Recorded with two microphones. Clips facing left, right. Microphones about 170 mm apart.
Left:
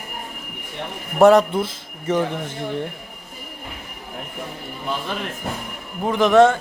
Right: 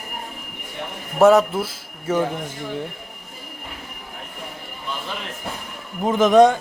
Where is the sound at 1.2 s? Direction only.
5° right (ahead or behind).